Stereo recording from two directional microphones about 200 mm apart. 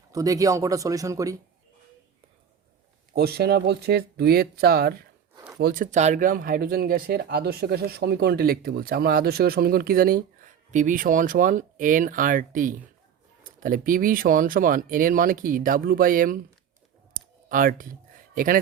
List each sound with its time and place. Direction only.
0.1 s speech: 15° right (ahead or behind)
3.2 s speech: 55° right (ahead or behind)
17.2 s a sound: 45° right (ahead or behind)
18.3 s speech: 45° right (ahead or behind)